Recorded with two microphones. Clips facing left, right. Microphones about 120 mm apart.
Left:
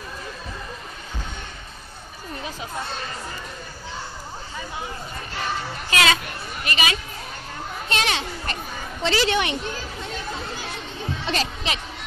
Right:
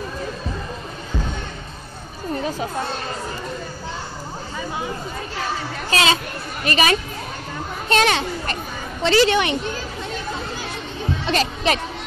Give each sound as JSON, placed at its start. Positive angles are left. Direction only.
{"t": 5.9, "sound": "speech", "side_deg": -30}
{"t": 6.6, "sound": "a woman's voice", "side_deg": -40}
{"t": 11.2, "sound": "music", "side_deg": -55}